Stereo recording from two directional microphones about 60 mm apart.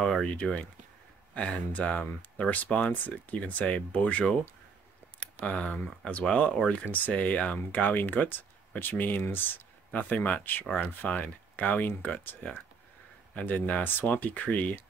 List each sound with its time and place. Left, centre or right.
0.0 s speech: centre; by 14.8 s left